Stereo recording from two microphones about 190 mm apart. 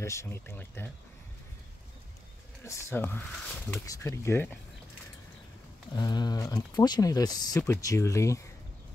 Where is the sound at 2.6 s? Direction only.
15° left (ahead or behind).